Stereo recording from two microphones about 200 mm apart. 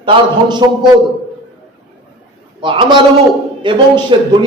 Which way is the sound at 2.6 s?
25° right (ahead or behind).